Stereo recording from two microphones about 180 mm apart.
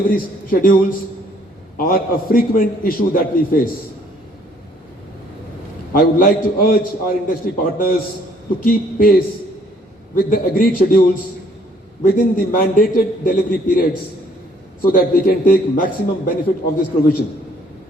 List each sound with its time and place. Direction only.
0.1 s a man's voice: 55° left (ahead or behind)
5.9 s a man's voice: 50° left (ahead or behind)
12.0 s a man's voice: 50° left (ahead or behind)